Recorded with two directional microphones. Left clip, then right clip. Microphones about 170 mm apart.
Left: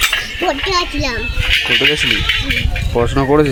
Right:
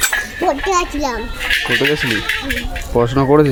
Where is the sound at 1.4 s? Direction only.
20° left (ahead or behind).